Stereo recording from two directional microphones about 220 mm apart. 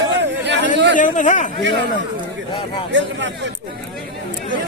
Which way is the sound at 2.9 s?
55° right (ahead or behind).